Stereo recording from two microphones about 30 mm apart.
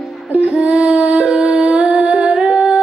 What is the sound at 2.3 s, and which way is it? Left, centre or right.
Humming, right.